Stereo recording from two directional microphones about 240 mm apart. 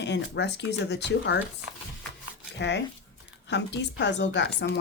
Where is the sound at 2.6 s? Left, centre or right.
Left.